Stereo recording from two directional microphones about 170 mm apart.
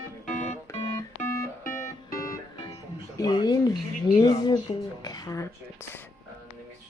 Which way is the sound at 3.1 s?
25° left (ahead or behind).